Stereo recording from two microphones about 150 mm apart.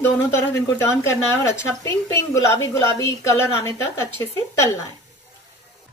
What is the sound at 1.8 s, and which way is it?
A woman's voice, 20° left (ahead or behind).